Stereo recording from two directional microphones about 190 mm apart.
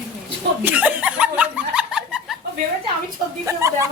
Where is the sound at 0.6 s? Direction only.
10° right (ahead or behind).